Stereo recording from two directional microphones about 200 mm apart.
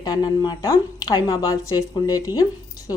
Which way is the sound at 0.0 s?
20° left (ahead or behind).